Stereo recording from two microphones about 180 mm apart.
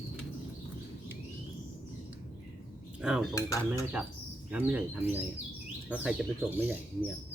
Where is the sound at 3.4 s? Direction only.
20° left (ahead or behind).